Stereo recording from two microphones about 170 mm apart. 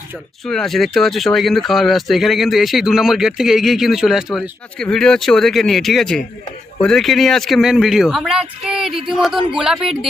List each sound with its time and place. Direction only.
0.4 s speech: 5° left (ahead or behind)